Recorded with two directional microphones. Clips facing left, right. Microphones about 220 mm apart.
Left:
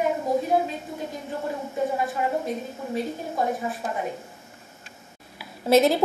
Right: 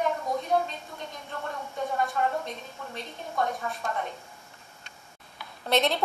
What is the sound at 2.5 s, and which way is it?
A woman's voice, 5° left (ahead or behind).